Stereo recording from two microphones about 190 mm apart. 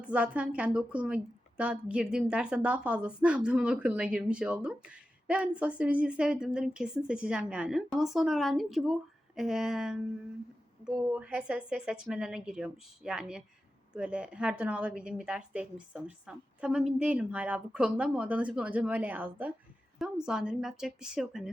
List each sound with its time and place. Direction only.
0.1 s a woman's voice: 5° right (ahead or behind)